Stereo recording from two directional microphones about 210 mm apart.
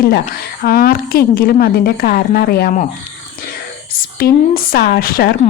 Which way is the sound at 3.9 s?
45° left (ahead or behind).